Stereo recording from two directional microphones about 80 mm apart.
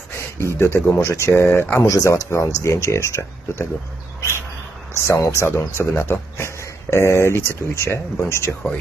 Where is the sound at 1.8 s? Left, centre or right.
Left.